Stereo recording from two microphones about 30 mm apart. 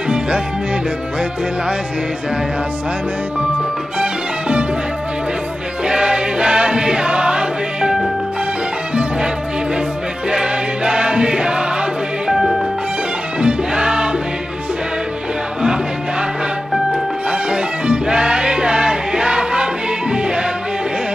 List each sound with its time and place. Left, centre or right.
4.0 s music: right
5.9 s music: right
10.3 s music: right
12.3 s music: centre
13.4 s music: right
15.6 s music: right